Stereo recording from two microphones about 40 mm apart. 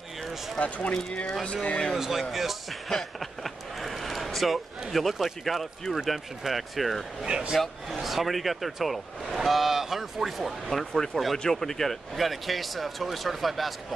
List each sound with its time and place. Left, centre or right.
0.6 s speech: left
2.0 s speech: centre
2.9 s a sound: centre
5.2 s speech: centre
7.2 s speech: right
7.9 s speech: centre